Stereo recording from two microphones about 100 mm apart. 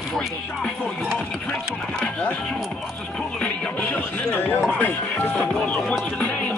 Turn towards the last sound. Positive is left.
turn(degrees=15)  # may be behind; listen again after turning